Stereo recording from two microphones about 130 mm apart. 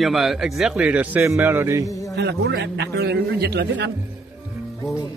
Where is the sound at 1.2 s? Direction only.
20° right (ahead or behind).